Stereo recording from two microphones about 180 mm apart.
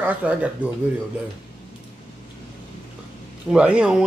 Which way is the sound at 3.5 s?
5° right (ahead or behind).